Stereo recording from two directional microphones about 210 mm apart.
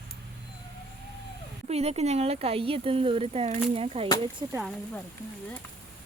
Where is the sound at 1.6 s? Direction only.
30° right (ahead or behind).